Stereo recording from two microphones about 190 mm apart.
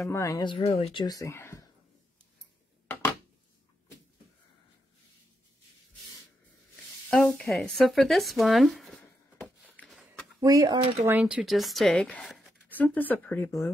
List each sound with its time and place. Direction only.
0.1 s speech: 15° left (ahead or behind)
7.1 s a sound: 5° left (ahead or behind)
10.4 s speech: 20° right (ahead or behind)
11.1 s speech: 10° right (ahead or behind); by 13.7 s 15° left (ahead or behind)